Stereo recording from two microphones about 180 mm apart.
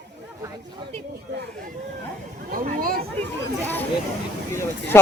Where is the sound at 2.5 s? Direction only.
50° right (ahead or behind).